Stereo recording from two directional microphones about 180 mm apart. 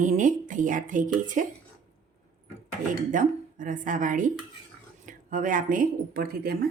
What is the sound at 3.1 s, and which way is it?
Speech, 45° right (ahead or behind).